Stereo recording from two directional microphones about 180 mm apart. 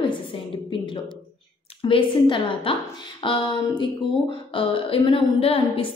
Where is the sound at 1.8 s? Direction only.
30° left (ahead or behind).